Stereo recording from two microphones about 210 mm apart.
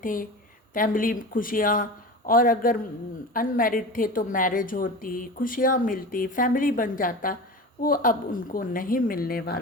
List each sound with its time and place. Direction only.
0.0 s a woman's voice: 40° left (ahead or behind)